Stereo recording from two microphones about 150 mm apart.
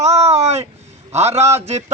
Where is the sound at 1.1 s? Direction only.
45° right (ahead or behind).